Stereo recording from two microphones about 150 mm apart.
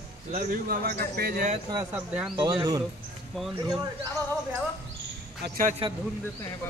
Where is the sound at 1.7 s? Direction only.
10° right (ahead or behind).